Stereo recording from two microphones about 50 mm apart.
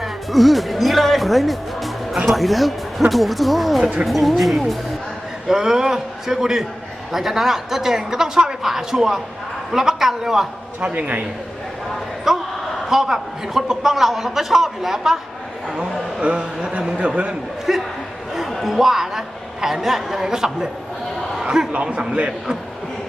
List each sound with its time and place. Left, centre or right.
0.0 s speech: centre
5.5 s a man's voice: centre
10.8 s speech: right
12.3 s a sound: centre
12.9 s a man's voice: centre
17.7 s a sound: centre
18.3 s a man's voice: centre
21.7 s speech: right